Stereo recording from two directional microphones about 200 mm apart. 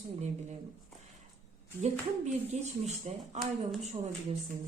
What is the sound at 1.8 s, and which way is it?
Speech, 35° right (ahead or behind).